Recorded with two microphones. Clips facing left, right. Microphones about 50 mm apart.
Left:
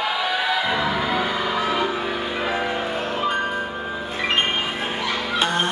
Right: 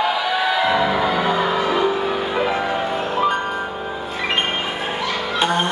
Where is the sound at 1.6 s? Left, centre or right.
Centre.